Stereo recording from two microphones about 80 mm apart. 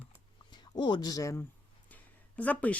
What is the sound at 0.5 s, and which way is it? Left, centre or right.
Speech, left.